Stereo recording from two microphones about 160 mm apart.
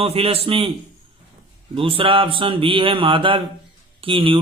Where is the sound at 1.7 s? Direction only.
35° right (ahead or behind).